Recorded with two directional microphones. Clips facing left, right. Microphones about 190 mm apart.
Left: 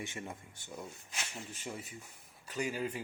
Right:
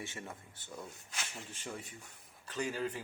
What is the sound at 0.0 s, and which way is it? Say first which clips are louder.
Speech: left 2 dB; 15° left (ahead or behind).